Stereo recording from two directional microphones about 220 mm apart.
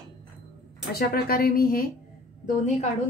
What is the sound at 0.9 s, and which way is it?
Speech, 45° left (ahead or behind).